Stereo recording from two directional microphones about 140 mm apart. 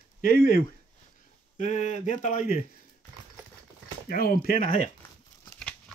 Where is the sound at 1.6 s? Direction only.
55° left (ahead or behind).